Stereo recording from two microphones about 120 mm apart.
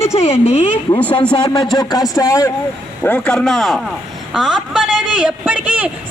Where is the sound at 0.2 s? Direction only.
60° left (ahead or behind).